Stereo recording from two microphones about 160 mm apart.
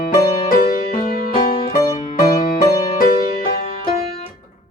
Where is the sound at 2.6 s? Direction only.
65° left (ahead or behind).